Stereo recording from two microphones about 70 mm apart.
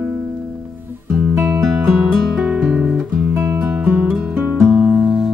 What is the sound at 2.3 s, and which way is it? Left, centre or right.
Music, centre.